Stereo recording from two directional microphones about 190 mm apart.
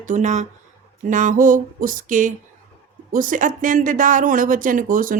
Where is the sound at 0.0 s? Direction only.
40° right (ahead or behind).